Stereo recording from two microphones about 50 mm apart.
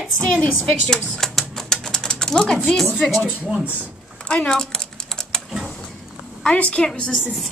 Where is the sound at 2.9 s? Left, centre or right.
Left.